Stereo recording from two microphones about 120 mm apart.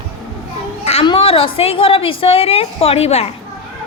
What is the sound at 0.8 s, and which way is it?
Children playing, 60° left (ahead or behind).